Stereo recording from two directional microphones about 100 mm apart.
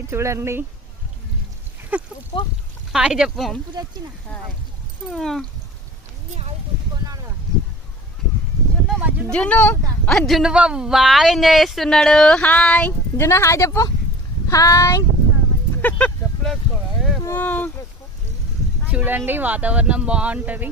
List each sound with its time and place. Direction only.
0.1 s speech: 30° right (ahead or behind)
1.9 s speech: 15° right (ahead or behind)
2.3 s speech: 65° left (ahead or behind)
2.9 s speech: 5° right (ahead or behind)
5.0 s speech: centre (ahead or behind)
9.0 s speech: 15° right (ahead or behind)
9.3 s speech: 10° left (ahead or behind)
10.1 s speech: 5° left (ahead or behind)
13.1 s speech: 25° left (ahead or behind)
15.8 s a sound: 15° left (ahead or behind)
17.2 s speech: 20° left (ahead or behind)
18.9 s speech: 15° right (ahead or behind)